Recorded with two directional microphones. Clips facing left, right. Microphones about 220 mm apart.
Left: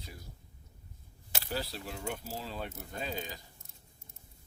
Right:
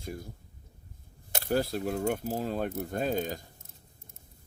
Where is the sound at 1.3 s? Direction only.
50° right (ahead or behind).